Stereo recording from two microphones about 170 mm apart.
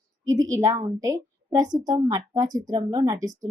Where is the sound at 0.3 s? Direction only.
20° right (ahead or behind).